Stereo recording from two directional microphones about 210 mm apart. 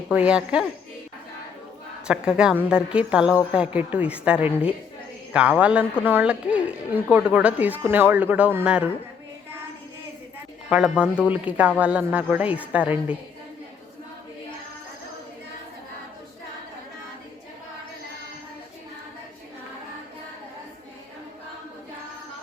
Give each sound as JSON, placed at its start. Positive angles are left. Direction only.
{"t": 0.1, "sound": "a woman's voice", "side_deg": -5}
{"t": 2.0, "sound": "a woman's voice", "side_deg": -5}
{"t": 10.7, "sound": "a woman's voice", "side_deg": -5}